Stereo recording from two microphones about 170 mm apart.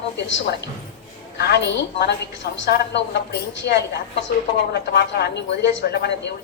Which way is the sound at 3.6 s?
90° left.